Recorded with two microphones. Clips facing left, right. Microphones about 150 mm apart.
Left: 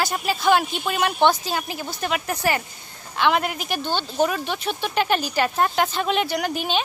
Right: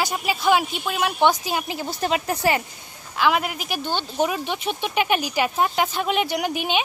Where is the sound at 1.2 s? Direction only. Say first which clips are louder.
Even; 15° right (ahead or behind).